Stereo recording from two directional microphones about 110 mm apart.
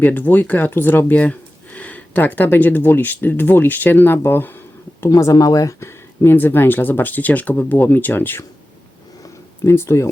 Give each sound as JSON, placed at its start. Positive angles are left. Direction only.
{"t": 0.0, "sound": "speech", "side_deg": 15}
{"t": 9.6, "sound": "speech", "side_deg": 25}